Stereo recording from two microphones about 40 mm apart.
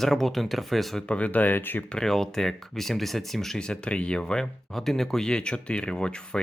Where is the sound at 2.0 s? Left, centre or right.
Centre.